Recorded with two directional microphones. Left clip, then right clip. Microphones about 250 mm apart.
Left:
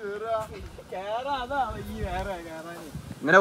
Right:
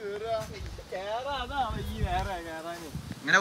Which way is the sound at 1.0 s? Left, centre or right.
Left.